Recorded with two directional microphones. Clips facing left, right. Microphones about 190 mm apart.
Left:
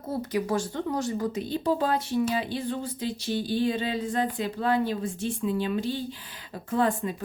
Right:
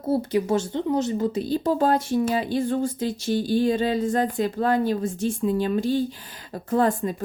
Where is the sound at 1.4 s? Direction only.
40° right (ahead or behind).